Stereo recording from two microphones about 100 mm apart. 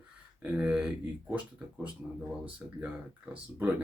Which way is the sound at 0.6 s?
10° right (ahead or behind).